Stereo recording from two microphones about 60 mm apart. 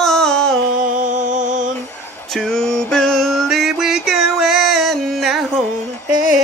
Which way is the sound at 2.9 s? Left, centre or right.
Centre.